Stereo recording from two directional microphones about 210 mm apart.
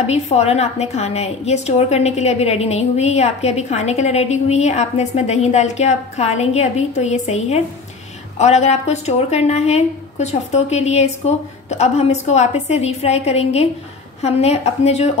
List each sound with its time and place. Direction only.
0.0 s a woman's voice: 30° left (ahead or behind)